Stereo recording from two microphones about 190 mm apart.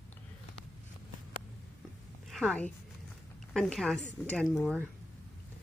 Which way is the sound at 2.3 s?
Centre (ahead or behind).